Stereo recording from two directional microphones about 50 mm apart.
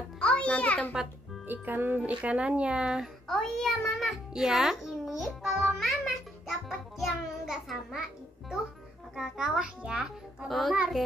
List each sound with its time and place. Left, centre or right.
0.2 s music: left
1.5 s speech: right
2.0 s speech: right
3.3 s child singing: centre
4.3 s music: centre
9.1 s a child's voice: centre
10.5 s a child's voice: centre